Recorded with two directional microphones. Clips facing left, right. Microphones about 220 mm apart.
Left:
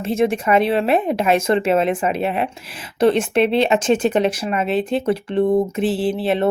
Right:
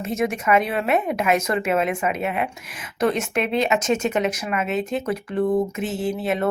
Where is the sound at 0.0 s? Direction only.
30° left (ahead or behind).